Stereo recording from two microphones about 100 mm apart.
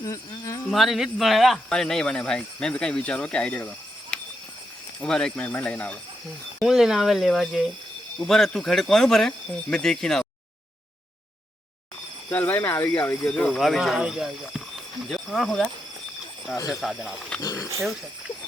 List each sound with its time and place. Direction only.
0.0 s speech: 35° left (ahead or behind)
0.7 s speech: centre (ahead or behind)
6.6 s speech: 5° right (ahead or behind)
12.3 s speech: 20° left (ahead or behind); by 15.7 s centre (ahead or behind)
16.6 s cricket: 35° left (ahead or behind)
17.4 s speech: 30° left (ahead or behind)